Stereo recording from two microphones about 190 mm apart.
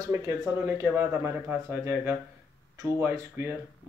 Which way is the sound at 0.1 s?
15° right (ahead or behind).